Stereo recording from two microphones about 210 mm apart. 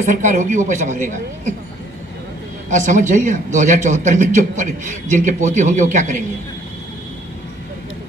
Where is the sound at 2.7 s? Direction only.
35° right (ahead or behind).